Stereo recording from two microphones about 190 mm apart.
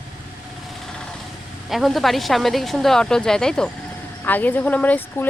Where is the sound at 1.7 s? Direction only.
Centre (ahead or behind).